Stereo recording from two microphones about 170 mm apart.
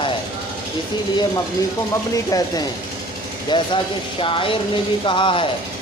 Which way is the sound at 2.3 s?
20° left (ahead or behind).